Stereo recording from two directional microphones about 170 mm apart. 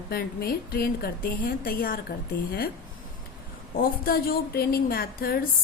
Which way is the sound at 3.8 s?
60° left (ahead or behind).